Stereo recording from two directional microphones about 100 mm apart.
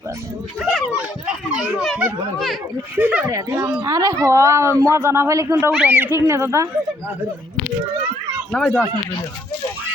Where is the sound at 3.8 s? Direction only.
30° right (ahead or behind).